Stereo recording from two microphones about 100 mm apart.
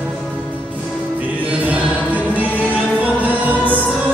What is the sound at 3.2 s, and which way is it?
Music, 15° right (ahead or behind).